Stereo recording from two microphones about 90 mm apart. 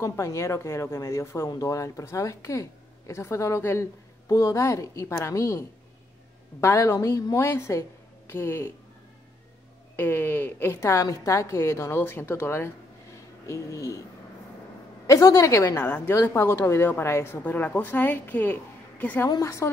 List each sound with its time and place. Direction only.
0.0 s a woman's voice: 30° left (ahead or behind)
9.9 s a woman's voice: 25° left (ahead or behind)
10.8 s a woman's voice: 35° left (ahead or behind)
15.0 s speech: 40° left (ahead or behind)
15.8 s a woman's voice: 20° left (ahead or behind)
19.2 s speech: 40° left (ahead or behind)